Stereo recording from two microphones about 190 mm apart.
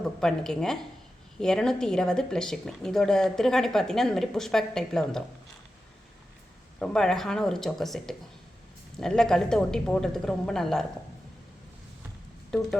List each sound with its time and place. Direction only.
0.2 s speech: 5° left (ahead or behind)
6.7 s speech: 5° left (ahead or behind)
12.5 s speech: 5° left (ahead or behind)